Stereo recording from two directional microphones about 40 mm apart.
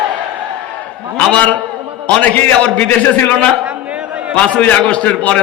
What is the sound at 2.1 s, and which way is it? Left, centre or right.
Speech, left.